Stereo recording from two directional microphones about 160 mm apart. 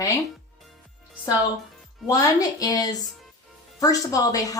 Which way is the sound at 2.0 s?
20° left (ahead or behind).